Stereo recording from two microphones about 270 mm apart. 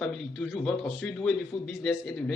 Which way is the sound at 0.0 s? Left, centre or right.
Centre.